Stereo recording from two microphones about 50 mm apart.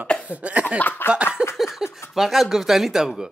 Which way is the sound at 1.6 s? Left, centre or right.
Centre.